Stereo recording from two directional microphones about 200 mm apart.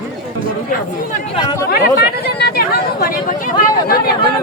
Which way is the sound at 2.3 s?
55° left (ahead or behind).